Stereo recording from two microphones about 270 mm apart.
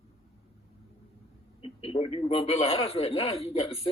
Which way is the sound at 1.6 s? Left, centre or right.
Centre.